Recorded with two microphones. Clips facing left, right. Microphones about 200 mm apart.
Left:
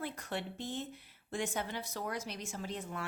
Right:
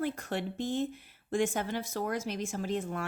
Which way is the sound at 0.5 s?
90° right.